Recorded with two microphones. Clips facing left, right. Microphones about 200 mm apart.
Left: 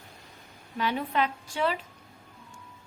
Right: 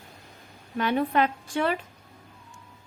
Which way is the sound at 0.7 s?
55° right (ahead or behind).